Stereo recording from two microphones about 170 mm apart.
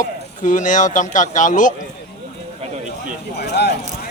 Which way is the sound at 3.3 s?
75° left (ahead or behind).